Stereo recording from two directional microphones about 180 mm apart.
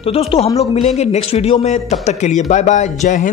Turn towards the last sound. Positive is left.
turn(degrees=45)  # may be behind; listen again after turning